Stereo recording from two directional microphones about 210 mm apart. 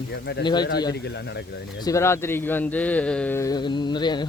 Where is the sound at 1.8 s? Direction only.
15° left (ahead or behind).